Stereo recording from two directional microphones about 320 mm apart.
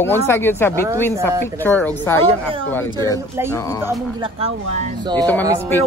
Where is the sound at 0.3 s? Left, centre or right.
Centre.